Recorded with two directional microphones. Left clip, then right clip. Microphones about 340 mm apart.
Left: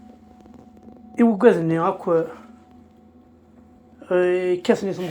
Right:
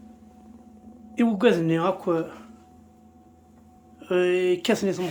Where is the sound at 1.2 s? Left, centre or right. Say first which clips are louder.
Left 5 dB; centre.